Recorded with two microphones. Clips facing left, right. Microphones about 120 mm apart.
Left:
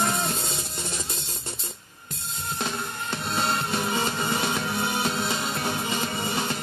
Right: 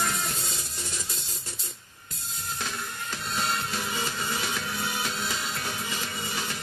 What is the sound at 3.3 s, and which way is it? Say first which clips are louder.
Music: left 4 dB; 25° left (ahead or behind).